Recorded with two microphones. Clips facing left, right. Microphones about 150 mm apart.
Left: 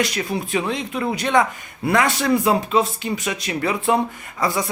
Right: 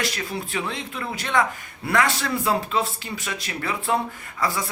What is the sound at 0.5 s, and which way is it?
Speech, 15° left (ahead or behind).